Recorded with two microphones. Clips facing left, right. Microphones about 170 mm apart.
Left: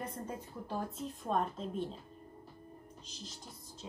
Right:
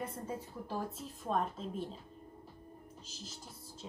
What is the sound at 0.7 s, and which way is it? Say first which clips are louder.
A woman's voice: left 2 dB; 5° right (ahead or behind).